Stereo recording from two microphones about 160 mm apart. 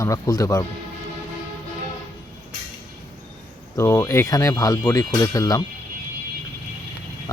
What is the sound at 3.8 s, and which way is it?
Speech, 15° left (ahead or behind).